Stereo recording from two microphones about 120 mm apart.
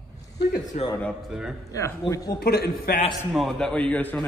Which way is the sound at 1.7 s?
25° left (ahead or behind).